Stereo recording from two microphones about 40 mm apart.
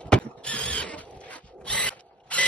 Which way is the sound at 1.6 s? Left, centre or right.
Left.